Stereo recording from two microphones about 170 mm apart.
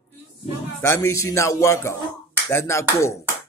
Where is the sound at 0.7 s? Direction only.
15° left (ahead or behind).